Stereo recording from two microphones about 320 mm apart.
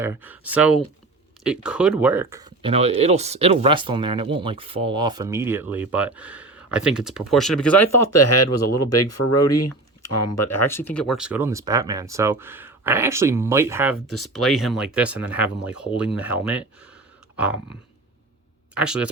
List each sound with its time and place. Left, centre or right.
0.0 s speech: centre
7.9 s speech: left
10.7 s speech: centre
18.7 s speech: centre